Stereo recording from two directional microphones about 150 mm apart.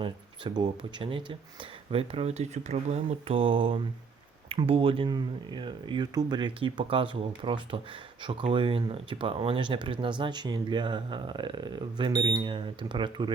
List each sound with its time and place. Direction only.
0.0 s speech: 30° right (ahead or behind)